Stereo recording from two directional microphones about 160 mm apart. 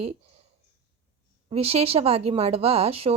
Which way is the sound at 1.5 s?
40° right (ahead or behind).